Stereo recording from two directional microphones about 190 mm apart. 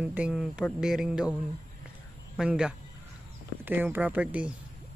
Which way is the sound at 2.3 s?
5° right (ahead or behind).